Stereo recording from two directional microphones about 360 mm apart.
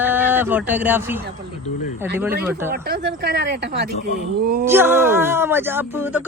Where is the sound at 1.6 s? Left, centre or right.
Centre.